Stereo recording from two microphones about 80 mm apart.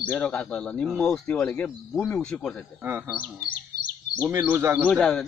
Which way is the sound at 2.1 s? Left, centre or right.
Centre.